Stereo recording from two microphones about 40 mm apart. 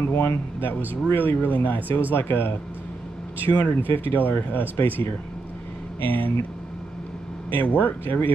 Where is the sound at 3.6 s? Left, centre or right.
Left.